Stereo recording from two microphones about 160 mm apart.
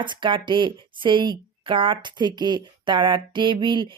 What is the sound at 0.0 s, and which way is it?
Speech, 30° right (ahead or behind).